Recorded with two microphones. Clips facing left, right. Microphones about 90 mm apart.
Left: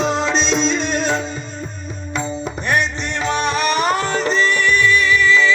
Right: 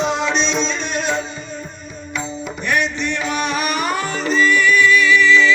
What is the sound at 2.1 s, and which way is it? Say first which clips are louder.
Music: left 3 dB; 25° left (ahead or behind).